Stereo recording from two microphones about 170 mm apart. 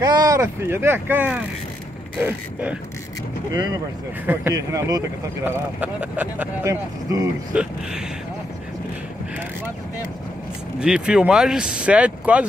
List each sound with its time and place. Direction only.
0.0 s speech: 20° right (ahead or behind)
3.5 s speech: 25° right (ahead or behind)
4.3 s speech: 10° right (ahead or behind)
10.8 s speech: 5° right (ahead or behind)